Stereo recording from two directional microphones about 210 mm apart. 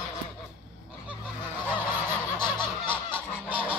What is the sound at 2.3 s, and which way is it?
Honk, 20° left (ahead or behind).